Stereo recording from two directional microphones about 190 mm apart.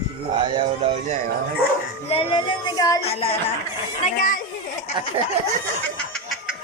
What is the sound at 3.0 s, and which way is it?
Speech, 30° left (ahead or behind).